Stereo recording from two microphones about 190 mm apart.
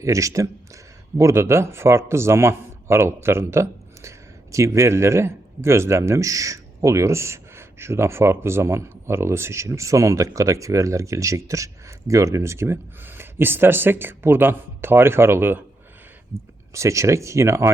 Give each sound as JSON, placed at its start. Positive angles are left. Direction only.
{"t": 0.0, "sound": "speech", "side_deg": -15}
{"t": 16.7, "sound": "speech", "side_deg": -15}